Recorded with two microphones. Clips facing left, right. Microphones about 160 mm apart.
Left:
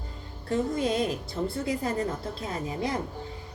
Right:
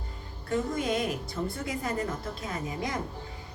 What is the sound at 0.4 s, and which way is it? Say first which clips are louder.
A woman's voice: left 2 dB; 30° left (ahead or behind).